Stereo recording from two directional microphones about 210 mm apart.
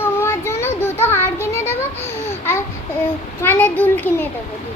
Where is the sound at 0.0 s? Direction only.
10° left (ahead or behind).